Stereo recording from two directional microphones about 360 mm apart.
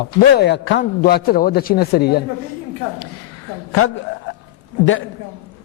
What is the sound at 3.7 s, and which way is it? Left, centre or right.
Speech, left.